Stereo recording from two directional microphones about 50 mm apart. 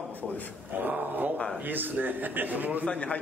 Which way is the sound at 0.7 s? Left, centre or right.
Right.